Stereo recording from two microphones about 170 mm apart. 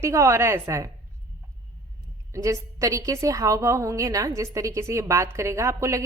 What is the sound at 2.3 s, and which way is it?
A woman's voice, 20° right (ahead or behind).